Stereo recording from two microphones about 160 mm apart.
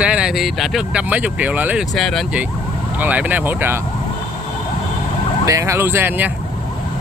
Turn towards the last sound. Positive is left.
turn(degrees=-10)  # may be behind; listen again after turning